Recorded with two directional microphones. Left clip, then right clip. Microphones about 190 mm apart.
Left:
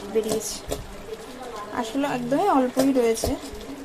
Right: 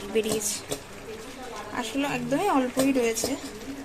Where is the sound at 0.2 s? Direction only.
Centre (ahead or behind).